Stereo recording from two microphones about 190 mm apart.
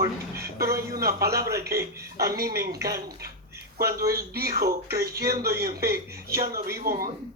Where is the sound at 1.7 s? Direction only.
15° right (ahead or behind).